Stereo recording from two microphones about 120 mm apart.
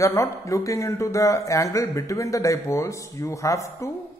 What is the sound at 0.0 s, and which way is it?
Speech, 25° left (ahead or behind).